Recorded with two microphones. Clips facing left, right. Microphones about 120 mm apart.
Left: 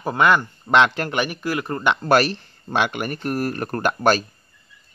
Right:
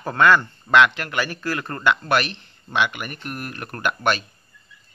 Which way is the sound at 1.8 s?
30° left (ahead or behind).